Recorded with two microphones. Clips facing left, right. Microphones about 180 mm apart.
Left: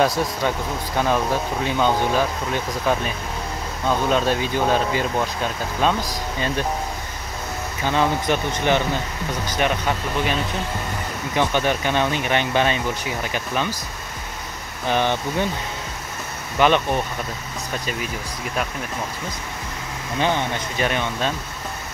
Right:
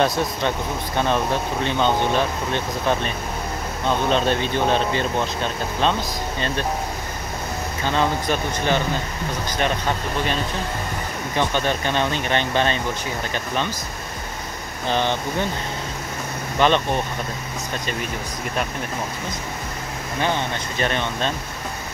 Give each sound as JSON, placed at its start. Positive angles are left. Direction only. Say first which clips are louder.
{"t": 0.9, "sound": "speech", "louder": "left 1 dB", "side_deg": 5}
{"t": 4.1, "sound": "speech", "louder": "even", "side_deg": 5}
{"t": 7.8, "sound": "speech", "louder": "left 1 dB", "side_deg": 15}
{"t": 11.3, "sound": "speech", "louder": "left 2 dB", "side_deg": 15}
{"t": 14.9, "sound": "speech", "louder": "left 1 dB", "side_deg": 15}
{"t": 16.5, "sound": "speech", "louder": "left 1 dB", "side_deg": 10}
{"t": 20.2, "sound": "speech", "louder": "left 2 dB", "side_deg": 15}